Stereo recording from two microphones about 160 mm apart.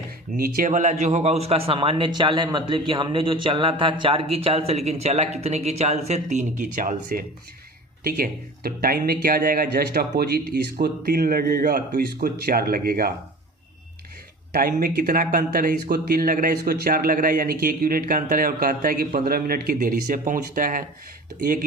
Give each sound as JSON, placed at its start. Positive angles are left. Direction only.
{"t": 0.3, "sound": "speech", "side_deg": -70}
{"t": 8.0, "sound": "speech", "side_deg": -70}
{"t": 14.5, "sound": "speech", "side_deg": -70}